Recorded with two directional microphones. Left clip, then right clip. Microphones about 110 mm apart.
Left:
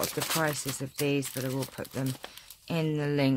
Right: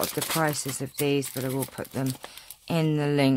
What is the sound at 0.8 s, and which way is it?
Speech, 40° right (ahead or behind).